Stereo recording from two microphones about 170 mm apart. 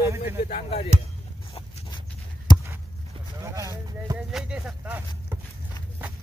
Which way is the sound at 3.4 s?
20° right (ahead or behind).